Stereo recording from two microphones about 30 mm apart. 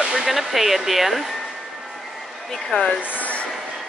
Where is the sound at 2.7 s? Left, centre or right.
Left.